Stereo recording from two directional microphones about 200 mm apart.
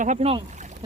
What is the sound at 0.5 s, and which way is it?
Rowboat, 35° right (ahead or behind).